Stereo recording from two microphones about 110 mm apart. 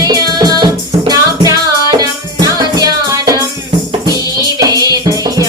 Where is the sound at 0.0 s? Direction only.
35° right (ahead or behind).